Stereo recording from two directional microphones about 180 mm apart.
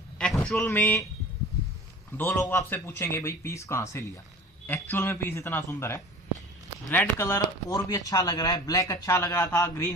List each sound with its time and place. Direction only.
0.2 s speech: 5° left (ahead or behind)
2.1 s a man's voice: 15° left (ahead or behind)